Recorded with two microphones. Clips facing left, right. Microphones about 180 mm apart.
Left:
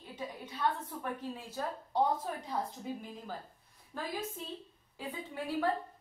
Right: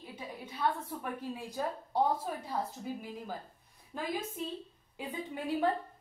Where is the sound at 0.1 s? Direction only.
10° right (ahead or behind).